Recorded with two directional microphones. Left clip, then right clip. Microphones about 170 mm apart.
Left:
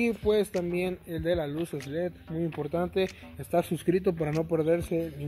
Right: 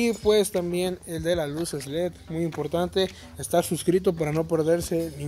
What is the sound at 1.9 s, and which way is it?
Speech, 20° left (ahead or behind).